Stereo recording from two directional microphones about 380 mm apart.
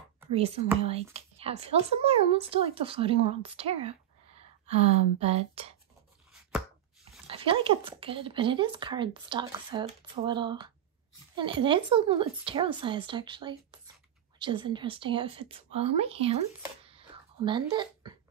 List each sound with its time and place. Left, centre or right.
0.3 s speech: centre
7.2 s speech: centre
16.8 s a sound: centre